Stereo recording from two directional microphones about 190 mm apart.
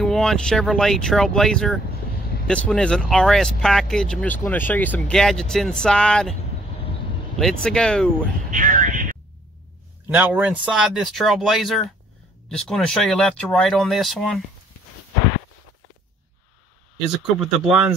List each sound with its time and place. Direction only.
0.0 s speech: centre (ahead or behind)
7.3 s speech: 5° left (ahead or behind)
8.5 s speech: 45° right (ahead or behind)
10.0 s speech: 5° right (ahead or behind)
17.2 s speech: centre (ahead or behind)